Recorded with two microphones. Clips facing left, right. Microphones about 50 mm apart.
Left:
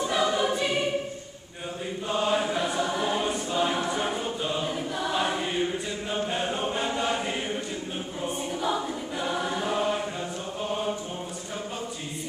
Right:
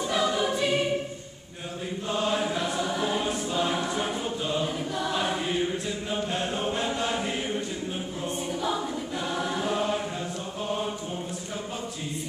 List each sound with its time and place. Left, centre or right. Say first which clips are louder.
0.0 s choir: left 1 dB; centre
2.0 s choir: left 1 dB; centre
10.6 s mantra: even; centre